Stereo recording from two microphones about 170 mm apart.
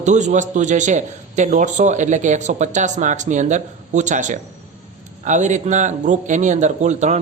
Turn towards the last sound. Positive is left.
turn(degrees=-45)  # may be behind; listen again after turning